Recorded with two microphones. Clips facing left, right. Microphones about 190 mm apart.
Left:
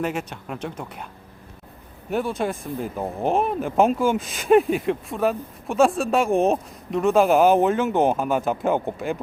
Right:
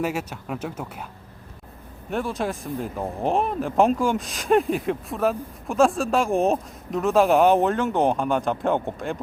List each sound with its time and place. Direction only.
0.0 s speech: 5° right (ahead or behind)
2.0 s speech: centre (ahead or behind)